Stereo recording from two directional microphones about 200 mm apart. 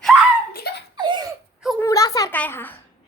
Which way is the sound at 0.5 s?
50° left (ahead or behind).